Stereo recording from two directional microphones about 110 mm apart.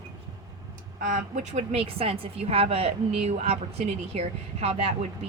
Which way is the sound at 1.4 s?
90° right.